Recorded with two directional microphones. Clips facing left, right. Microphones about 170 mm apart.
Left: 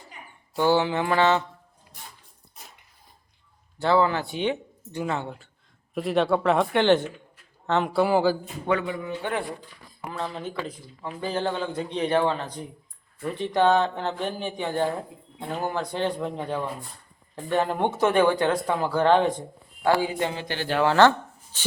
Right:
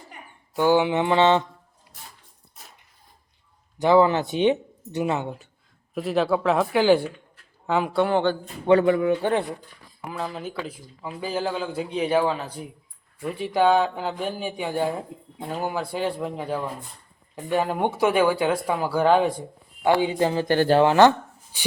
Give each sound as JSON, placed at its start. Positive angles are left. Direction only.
{"t": 0.5, "sound": "mantra", "side_deg": -15}
{"t": 3.8, "sound": "mantra", "side_deg": -15}
{"t": 4.9, "sound": "speech", "side_deg": -20}
{"t": 5.9, "sound": "speech", "side_deg": 0}
{"t": 7.9, "sound": "speech", "side_deg": 5}
{"t": 8.8, "sound": "speech", "side_deg": -65}
{"t": 10.1, "sound": "speech", "side_deg": -5}
{"t": 20.0, "sound": "speech", "side_deg": -30}
{"t": 20.8, "sound": "speech", "side_deg": -15}